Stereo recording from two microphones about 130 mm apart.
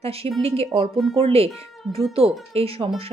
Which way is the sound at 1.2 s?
50° right (ahead or behind).